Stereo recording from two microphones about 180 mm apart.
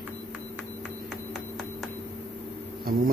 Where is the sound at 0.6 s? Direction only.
Centre (ahead or behind).